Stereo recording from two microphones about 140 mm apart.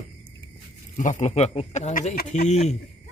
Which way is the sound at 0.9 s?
65° left (ahead or behind).